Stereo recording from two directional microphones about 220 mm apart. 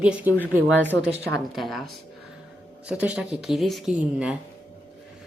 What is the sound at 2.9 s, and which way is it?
Speech, 5° right (ahead or behind).